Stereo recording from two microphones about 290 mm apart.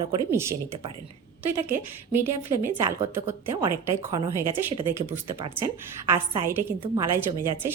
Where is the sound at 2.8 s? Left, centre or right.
Centre.